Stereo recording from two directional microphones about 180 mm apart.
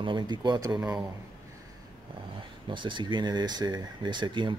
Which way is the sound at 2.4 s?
25° right (ahead or behind).